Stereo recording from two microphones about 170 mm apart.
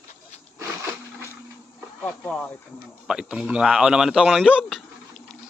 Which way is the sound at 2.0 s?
5° left (ahead or behind).